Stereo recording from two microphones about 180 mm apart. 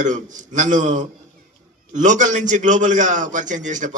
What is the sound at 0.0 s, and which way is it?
A man's voice, 45° right (ahead or behind).